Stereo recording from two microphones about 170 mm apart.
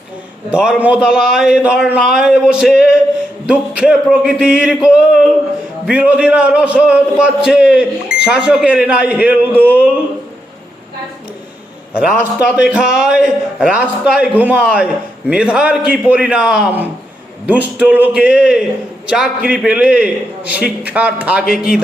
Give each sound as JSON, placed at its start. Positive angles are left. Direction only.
{"t": 0.5, "sound": "a man's voice", "side_deg": -5}
{"t": 11.9, "sound": "a man's voice", "side_deg": -5}